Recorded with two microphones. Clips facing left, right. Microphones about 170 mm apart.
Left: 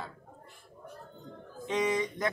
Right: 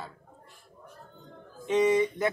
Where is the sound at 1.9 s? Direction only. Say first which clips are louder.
Right 6 dB; 10° right (ahead or behind).